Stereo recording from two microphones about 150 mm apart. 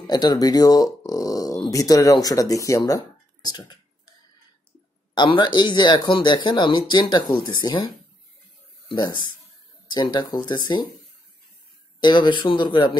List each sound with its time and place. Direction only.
0.0 s speech: 30° left (ahead or behind)
3.4 s a sound: 30° left (ahead or behind)
5.1 s speech: 30° left (ahead or behind)
12.0 s speech: 30° left (ahead or behind)